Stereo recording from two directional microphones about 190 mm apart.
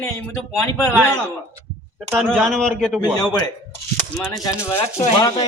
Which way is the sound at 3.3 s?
20° left (ahead or behind).